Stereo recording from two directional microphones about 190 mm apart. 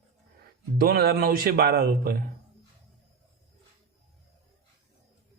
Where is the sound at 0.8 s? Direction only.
55° right (ahead or behind).